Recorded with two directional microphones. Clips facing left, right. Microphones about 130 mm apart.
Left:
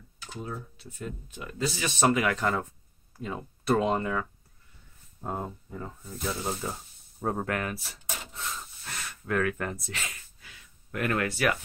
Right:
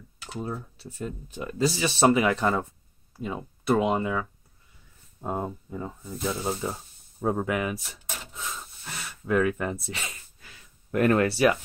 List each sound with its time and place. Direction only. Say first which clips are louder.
0.4 s speech: right 4 dB; 35° right (ahead or behind); by 7.8 s 10° right (ahead or behind)
8.3 s snort: right 1 dB; 5° right (ahead or behind)
9.2 s speech: right 4 dB; 15° right (ahead or behind)
10.0 s a sound: right 1 dB; 35° right (ahead or behind)